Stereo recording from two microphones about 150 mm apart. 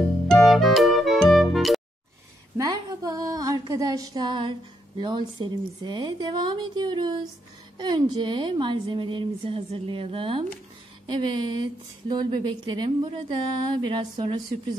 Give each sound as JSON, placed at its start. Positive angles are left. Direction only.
{"t": 0.3, "sound": "music", "side_deg": 0}
{"t": 2.5, "sound": "a sound", "side_deg": -25}
{"t": 7.7, "sound": "a woman's voice", "side_deg": -30}